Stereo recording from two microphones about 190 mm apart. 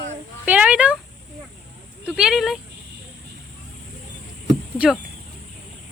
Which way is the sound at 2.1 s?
Centre (ahead or behind).